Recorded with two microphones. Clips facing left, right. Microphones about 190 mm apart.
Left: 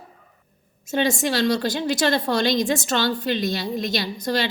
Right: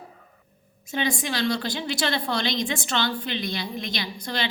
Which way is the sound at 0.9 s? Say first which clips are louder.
Left 5 dB; 45° left (ahead or behind).